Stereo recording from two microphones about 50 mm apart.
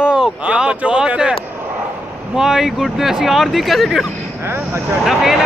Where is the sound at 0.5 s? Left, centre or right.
Right.